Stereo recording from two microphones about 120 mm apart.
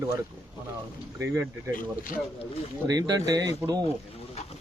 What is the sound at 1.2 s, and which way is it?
Speech, 20° right (ahead or behind).